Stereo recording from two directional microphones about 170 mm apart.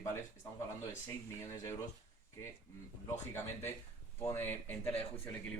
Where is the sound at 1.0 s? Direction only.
15° left (ahead or behind).